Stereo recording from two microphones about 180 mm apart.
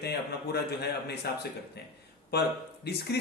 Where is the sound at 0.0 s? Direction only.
65° left (ahead or behind).